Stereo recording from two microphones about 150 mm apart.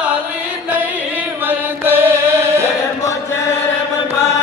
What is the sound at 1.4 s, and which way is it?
Chant, 15° right (ahead or behind).